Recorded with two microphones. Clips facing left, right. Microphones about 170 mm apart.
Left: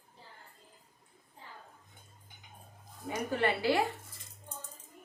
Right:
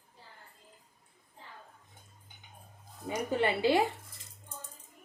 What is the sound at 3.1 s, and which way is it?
Speech, 20° right (ahead or behind).